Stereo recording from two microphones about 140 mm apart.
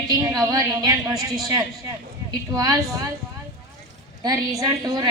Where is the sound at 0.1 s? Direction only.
25° right (ahead or behind).